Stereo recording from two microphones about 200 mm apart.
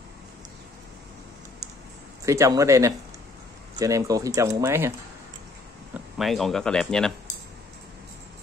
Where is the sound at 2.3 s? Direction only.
15° right (ahead or behind).